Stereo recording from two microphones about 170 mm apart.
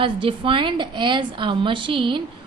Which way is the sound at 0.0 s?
30° right (ahead or behind).